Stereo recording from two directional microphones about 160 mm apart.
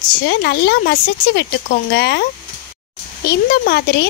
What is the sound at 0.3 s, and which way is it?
Speech, 90° left.